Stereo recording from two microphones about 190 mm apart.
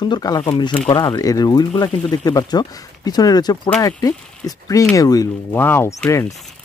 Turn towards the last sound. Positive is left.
turn(degrees=15)  # may be behind; listen again after turning